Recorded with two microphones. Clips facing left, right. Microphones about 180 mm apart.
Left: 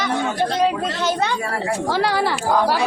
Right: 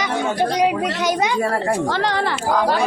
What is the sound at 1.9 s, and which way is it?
Speech, 10° left (ahead or behind).